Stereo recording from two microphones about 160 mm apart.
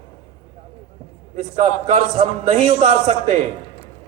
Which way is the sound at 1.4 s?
50° right (ahead or behind).